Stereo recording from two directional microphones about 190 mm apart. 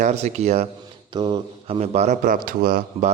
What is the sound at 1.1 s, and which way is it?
A man's voice, 25° right (ahead or behind).